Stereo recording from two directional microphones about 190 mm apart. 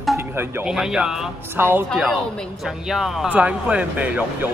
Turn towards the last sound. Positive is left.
turn(degrees=-10)  # may be behind; listen again after turning